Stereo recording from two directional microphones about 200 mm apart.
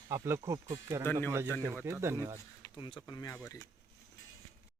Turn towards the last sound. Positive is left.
turn(degrees=20)  # may be behind; listen again after turning